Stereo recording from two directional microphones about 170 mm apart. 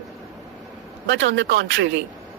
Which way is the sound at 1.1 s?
90° right.